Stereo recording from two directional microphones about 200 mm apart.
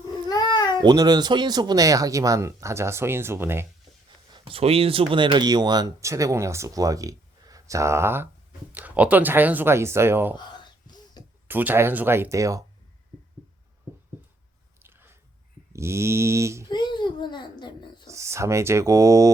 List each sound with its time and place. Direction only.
0.3 s a sound: 20° left (ahead or behind)
0.8 s speech: 20° right (ahead or behind)
4.3 s speech: 25° right (ahead or behind); by 10.3 s 10° right (ahead or behind)
10.3 s a sound: 20° left (ahead or behind)
11.4 s speech: 10° right (ahead or behind)
14.8 s biting: 10° right (ahead or behind)
15.7 s speech: 15° right (ahead or behind)
16.6 s a sound: 20° left (ahead or behind)
18.1 s speech: 15° right (ahead or behind)